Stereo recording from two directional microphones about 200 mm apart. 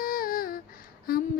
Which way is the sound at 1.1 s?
50° left (ahead or behind).